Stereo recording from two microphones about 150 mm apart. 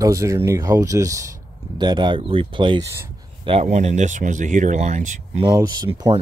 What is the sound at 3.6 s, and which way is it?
Speech, 50° right (ahead or behind).